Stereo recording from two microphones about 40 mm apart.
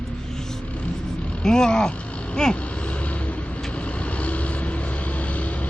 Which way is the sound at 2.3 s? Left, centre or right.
Left.